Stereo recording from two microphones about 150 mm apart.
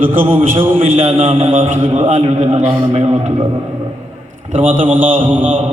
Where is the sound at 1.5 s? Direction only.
60° right (ahead or behind).